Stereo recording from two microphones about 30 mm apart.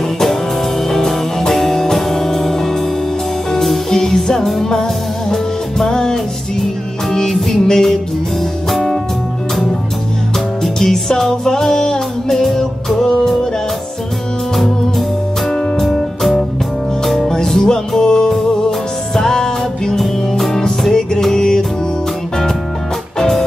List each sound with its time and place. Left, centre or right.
0.8 s music: centre
7.1 s music: centre
10.6 s music: centre
16.2 s music: centre
17.6 s music: left
20.0 s music: centre
20.9 s music: centre